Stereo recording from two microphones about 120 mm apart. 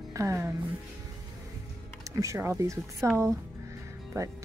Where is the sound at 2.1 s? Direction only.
25° right (ahead or behind).